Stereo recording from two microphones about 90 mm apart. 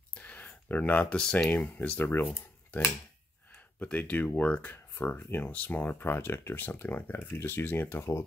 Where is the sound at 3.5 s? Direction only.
15° left (ahead or behind).